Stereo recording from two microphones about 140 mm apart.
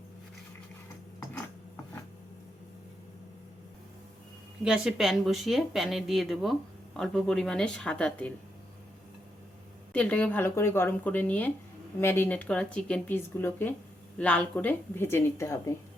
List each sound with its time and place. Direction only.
1.2 s a sound: 20° left (ahead or behind)
4.6 s speech: 5° right (ahead or behind)
9.9 s speech: 10° left (ahead or behind)